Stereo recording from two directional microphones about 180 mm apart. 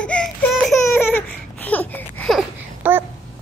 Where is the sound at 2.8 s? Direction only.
10° right (ahead or behind).